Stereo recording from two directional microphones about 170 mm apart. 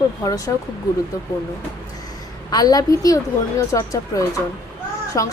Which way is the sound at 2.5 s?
20° left (ahead or behind).